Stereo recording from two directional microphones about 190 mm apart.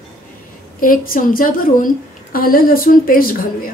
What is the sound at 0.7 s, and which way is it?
A woman's voice, 50° left (ahead or behind).